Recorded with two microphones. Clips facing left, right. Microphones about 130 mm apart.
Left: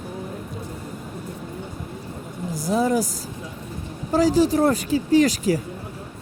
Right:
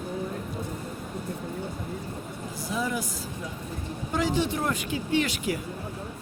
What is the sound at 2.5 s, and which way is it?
Speech, 40° left (ahead or behind).